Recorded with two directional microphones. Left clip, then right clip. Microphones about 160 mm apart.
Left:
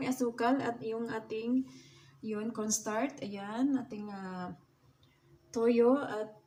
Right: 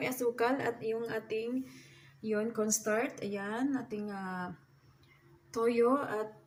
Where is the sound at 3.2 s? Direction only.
15° left (ahead or behind).